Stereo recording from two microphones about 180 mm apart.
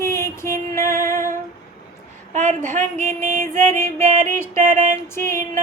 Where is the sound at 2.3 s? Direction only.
40° right (ahead or behind).